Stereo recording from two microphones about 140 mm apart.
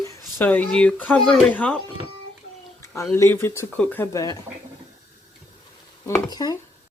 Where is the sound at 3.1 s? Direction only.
20° left (ahead or behind).